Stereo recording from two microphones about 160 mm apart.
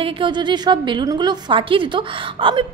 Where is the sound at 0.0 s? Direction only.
30° right (ahead or behind).